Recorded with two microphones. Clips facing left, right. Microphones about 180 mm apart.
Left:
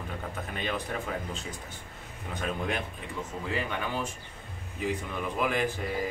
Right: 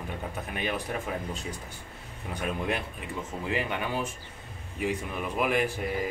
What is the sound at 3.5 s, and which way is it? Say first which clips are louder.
Speech: right 2 dB; 15° right (ahead or behind).